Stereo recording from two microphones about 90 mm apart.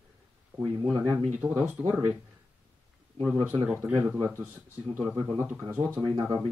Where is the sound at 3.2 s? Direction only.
10° right (ahead or behind).